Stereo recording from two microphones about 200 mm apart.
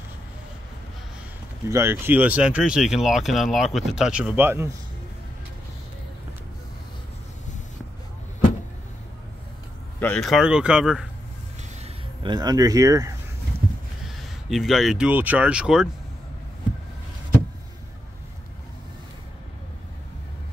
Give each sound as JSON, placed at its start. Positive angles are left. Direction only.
{"t": 1.7, "sound": "speech", "side_deg": -10}
{"t": 9.9, "sound": "speech", "side_deg": 10}
{"t": 11.8, "sound": "speech", "side_deg": -25}
{"t": 14.0, "sound": "speech", "side_deg": 0}